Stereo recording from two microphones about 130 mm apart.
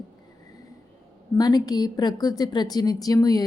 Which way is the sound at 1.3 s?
30° left (ahead or behind).